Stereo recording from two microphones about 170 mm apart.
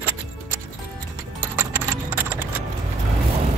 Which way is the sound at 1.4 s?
15° right (ahead or behind).